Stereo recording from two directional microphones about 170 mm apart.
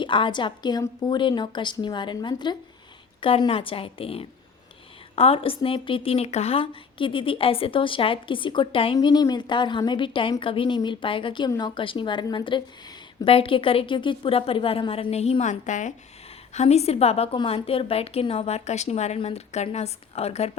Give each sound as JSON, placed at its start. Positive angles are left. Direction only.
{"t": 0.0, "sound": "a woman's voice", "side_deg": 30}